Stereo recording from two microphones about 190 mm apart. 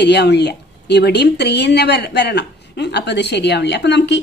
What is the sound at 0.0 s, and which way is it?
A woman's voice, 60° left (ahead or behind).